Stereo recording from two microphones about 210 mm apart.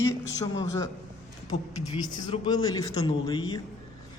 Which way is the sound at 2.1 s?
20° left (ahead or behind).